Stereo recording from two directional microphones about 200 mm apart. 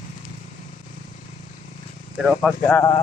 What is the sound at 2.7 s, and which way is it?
Speech, 15° left (ahead or behind).